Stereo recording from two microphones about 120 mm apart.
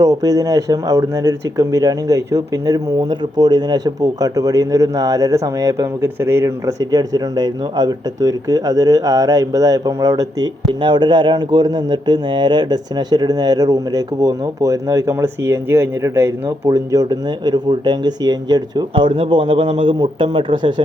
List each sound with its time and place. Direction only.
0.0 s speech: 30° right (ahead or behind)